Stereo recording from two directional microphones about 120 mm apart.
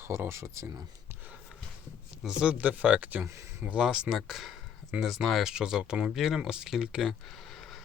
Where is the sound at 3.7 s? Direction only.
5° right (ahead or behind).